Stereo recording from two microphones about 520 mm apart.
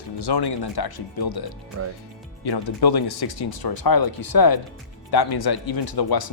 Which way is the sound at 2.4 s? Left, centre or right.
Left.